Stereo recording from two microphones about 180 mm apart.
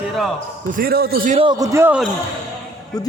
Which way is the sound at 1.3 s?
30° right (ahead or behind).